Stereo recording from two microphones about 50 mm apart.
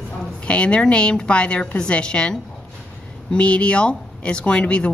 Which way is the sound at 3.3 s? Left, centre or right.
Left.